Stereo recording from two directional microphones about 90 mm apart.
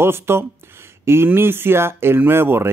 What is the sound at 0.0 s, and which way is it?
Speech, 25° right (ahead or behind).